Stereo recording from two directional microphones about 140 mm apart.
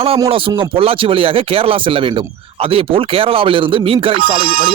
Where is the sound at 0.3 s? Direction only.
40° right (ahead or behind).